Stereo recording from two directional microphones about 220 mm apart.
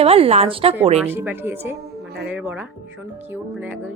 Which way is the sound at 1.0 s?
10° right (ahead or behind).